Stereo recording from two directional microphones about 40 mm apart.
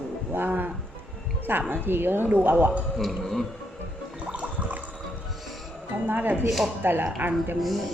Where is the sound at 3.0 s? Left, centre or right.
Centre.